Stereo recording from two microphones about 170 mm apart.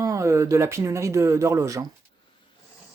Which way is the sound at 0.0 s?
20° right (ahead or behind).